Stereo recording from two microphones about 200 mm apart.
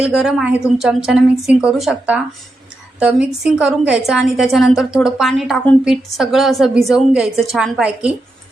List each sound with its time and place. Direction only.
0.0 s a woman's voice: 5° right (ahead or behind)